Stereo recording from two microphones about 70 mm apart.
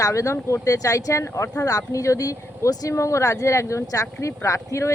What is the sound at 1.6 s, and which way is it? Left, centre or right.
Speech, left.